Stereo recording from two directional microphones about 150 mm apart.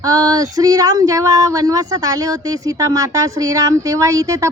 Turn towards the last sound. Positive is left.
turn(degrees=-20)  # may be behind; listen again after turning